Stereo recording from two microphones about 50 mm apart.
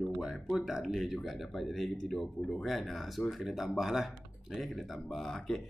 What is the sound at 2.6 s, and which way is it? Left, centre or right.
Speech, centre.